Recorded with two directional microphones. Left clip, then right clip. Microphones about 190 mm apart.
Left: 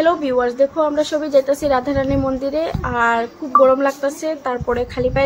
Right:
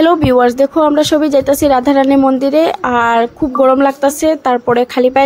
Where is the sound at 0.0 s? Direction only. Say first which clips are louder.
Right 7 dB; 55° right (ahead or behind).